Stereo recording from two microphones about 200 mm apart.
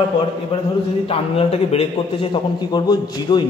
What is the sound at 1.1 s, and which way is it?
A woman's voice, 30° left (ahead or behind).